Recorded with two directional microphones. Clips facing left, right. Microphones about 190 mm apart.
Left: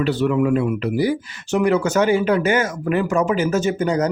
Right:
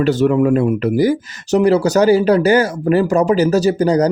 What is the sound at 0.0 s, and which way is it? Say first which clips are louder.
Speech: right 5 dB; 45° right (ahead or behind).